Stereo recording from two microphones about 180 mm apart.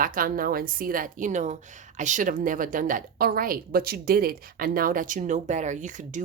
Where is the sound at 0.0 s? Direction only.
50° right (ahead or behind).